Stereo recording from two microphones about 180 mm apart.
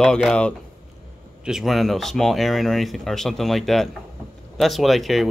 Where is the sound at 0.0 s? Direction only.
5° left (ahead or behind).